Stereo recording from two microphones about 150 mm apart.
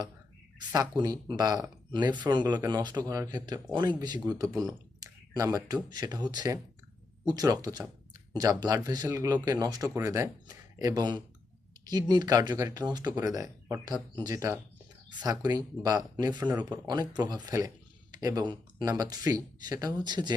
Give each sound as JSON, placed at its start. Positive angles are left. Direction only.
{"t": 0.7, "sound": "speech", "side_deg": -25}